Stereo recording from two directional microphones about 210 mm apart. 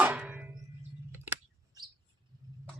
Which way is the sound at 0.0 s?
5° right (ahead or behind).